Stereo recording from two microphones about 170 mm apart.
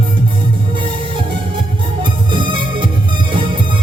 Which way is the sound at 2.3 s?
30° right (ahead or behind).